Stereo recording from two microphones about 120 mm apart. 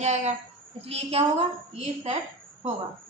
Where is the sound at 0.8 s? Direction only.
55° right (ahead or behind).